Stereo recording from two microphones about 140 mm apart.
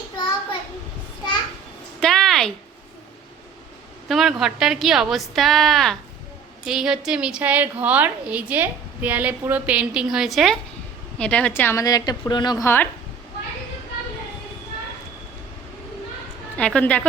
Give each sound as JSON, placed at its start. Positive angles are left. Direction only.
{"t": 2.0, "sound": "a sound", "side_deg": 5}
{"t": 4.1, "sound": "a woman's voice", "side_deg": 0}
{"t": 12.6, "sound": "speech", "side_deg": 15}
{"t": 16.6, "sound": "speech", "side_deg": 10}